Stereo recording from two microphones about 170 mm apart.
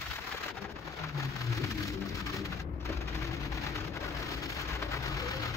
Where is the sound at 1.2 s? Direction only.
20° left (ahead or behind).